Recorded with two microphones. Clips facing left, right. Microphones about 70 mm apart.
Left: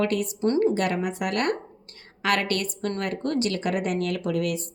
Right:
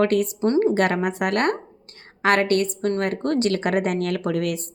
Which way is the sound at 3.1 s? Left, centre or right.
Right.